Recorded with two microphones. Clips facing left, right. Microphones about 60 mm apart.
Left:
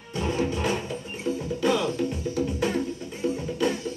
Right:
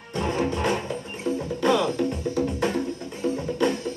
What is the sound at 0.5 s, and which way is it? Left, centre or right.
Music, right.